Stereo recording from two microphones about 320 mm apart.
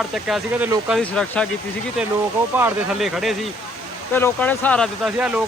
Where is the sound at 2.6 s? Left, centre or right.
Centre.